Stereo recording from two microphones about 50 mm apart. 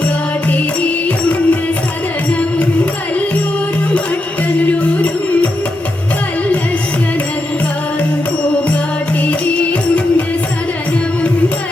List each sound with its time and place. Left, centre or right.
0.5 s music: left
4.6 s music: left
9.2 s music: left